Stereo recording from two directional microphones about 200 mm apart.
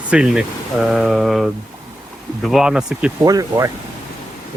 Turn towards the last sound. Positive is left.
turn(degrees=-15)  # may be behind; listen again after turning